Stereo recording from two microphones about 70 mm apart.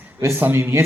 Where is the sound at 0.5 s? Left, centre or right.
Right.